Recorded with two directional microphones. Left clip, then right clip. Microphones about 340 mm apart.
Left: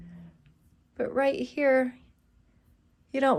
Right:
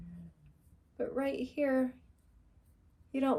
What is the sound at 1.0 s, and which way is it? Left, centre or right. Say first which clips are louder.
Speech: left 9 dB; left.